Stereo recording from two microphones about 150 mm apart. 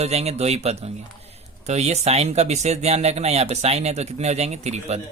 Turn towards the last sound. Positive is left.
turn(degrees=-45)  # may be behind; listen again after turning